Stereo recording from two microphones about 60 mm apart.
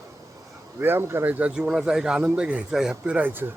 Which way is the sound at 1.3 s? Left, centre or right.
Right.